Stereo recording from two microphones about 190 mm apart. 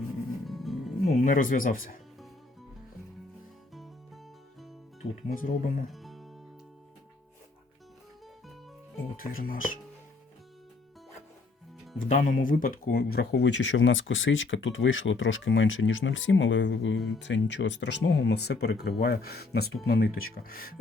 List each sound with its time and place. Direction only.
0.4 s music: centre (ahead or behind)
1.0 s speech: 45° left (ahead or behind)
5.3 s speech: 45° left (ahead or behind)
5.9 s music: centre (ahead or behind)
9.1 s speech: 50° left (ahead or behind)
11.9 s speech: 40° left (ahead or behind)